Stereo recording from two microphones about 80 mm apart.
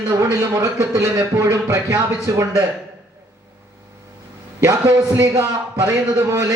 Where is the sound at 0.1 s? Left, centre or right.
Right.